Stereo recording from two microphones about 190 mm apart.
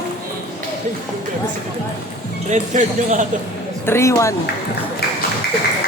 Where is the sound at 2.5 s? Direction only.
40° right (ahead or behind).